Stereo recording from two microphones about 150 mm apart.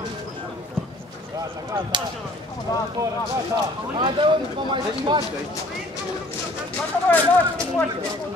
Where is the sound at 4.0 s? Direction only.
35° right (ahead or behind).